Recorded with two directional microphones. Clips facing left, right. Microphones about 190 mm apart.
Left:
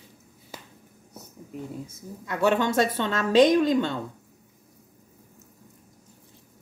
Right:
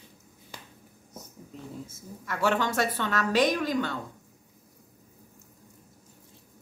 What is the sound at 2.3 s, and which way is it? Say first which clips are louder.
A woman's voice: left 4 dB; 20° left (ahead or behind).